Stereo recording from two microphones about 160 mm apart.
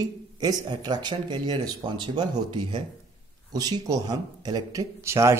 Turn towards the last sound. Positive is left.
turn(degrees=-15)  # may be behind; listen again after turning